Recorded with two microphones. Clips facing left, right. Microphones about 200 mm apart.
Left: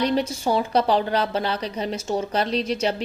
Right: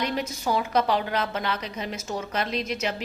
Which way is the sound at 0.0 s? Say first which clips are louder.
Left 6 dB; 30° left (ahead or behind).